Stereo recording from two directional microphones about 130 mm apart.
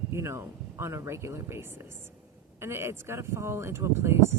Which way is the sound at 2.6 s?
20° right (ahead or behind).